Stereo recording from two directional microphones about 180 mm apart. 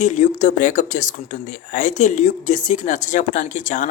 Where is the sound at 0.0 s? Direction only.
45° left (ahead or behind).